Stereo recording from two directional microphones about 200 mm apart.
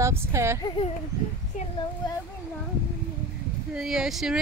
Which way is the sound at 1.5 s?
40° left (ahead or behind).